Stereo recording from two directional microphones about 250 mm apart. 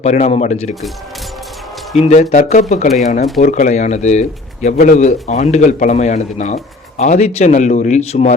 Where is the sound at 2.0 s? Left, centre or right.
Left.